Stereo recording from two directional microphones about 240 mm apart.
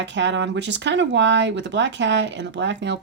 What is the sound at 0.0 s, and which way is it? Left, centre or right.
Speech, right.